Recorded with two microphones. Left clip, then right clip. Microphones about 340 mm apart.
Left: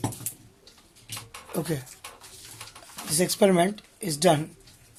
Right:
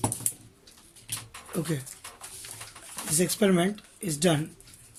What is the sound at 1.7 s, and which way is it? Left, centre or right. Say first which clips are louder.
Speech: left 2 dB; centre.